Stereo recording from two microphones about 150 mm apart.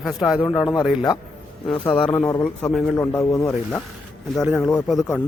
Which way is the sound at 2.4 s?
5° left (ahead or behind).